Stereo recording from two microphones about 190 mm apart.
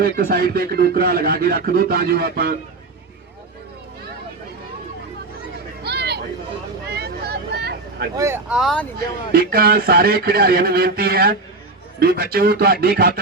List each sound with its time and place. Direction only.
0.0 s speech: 55° right (ahead or behind)
5.8 s a sound: 60° right (ahead or behind)
6.8 s vehicle: 55° right (ahead or behind)
8.1 s speech: 15° right (ahead or behind); by 8.9 s centre (ahead or behind)
9.3 s speech: 55° right (ahead or behind)